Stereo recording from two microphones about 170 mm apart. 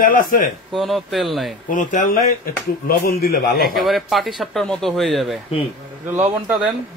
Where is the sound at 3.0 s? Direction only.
60° left (ahead or behind).